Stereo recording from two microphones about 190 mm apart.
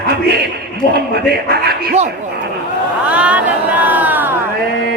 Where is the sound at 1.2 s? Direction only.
55° right (ahead or behind).